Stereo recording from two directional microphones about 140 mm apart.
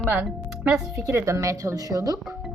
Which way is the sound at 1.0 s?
20° right (ahead or behind).